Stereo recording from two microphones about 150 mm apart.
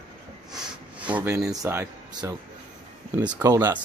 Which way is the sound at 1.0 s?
15° right (ahead or behind).